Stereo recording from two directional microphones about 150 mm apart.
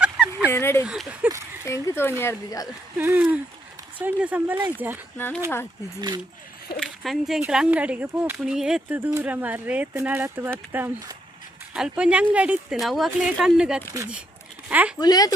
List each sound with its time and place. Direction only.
0.0 s a sound: 5° right (ahead or behind)
0.5 s speech: 15° left (ahead or behind)
0.9 s speech: 5° right (ahead or behind)
1.6 s speech: 15° left (ahead or behind)
3.0 s speech: 10° right (ahead or behind)
5.1 s speech: 15° left (ahead or behind)
6.8 s speech: centre (ahead or behind)
9.0 s speech: 15° right (ahead or behind)
14.9 s speech: 25° left (ahead or behind)